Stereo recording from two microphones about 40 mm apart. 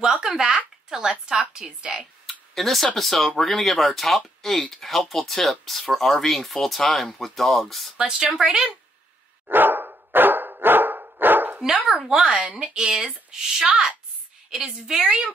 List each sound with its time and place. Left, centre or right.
0.0 s speech: centre
0.8 s a sound: centre
1.5 s speech: centre
2.5 s speech: centre
8.0 s a woman's voice: centre
9.5 s dog: right
11.6 s speech: centre
12.2 s a woman's voice: right